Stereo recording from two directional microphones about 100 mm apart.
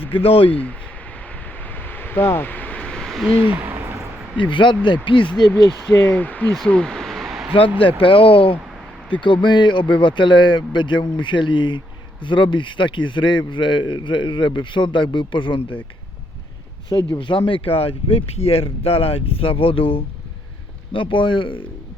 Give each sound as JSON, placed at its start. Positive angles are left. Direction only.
{"t": 0.1, "sound": "speech", "side_deg": 70}
{"t": 0.4, "sound": "speech", "side_deg": 15}
{"t": 1.6, "sound": "a sound", "side_deg": 20}
{"t": 3.4, "sound": "a sound", "side_deg": -15}
{"t": 4.4, "sound": "speech", "side_deg": 55}
{"t": 5.9, "sound": "speech", "side_deg": 20}
{"t": 6.6, "sound": "a sound", "side_deg": 10}
{"t": 7.8, "sound": "speech", "side_deg": 60}
{"t": 17.1, "sound": "speech", "side_deg": 55}